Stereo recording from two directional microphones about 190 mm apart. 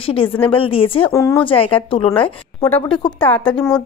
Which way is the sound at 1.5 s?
30° left (ahead or behind).